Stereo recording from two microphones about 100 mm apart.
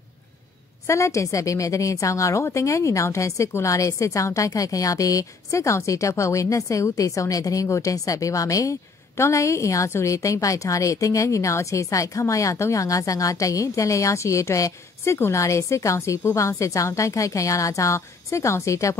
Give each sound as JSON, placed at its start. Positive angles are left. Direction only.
{"t": 0.8, "sound": "a woman's voice", "side_deg": 30}